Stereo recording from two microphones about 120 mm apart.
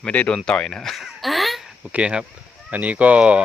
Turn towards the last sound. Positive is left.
turn(degrees=-10)  # may be behind; listen again after turning